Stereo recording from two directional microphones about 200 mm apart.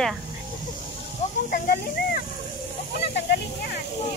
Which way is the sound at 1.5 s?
45° left (ahead or behind).